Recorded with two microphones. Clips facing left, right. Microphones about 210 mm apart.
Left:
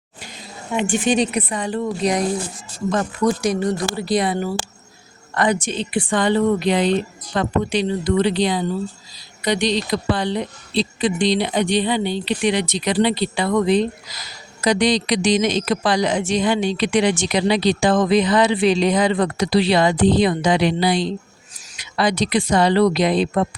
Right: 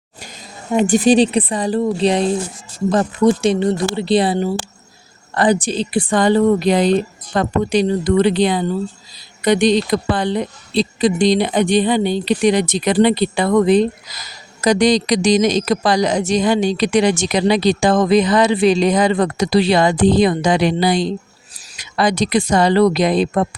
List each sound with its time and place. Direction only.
0.7 s a woman's voice: 40° right (ahead or behind)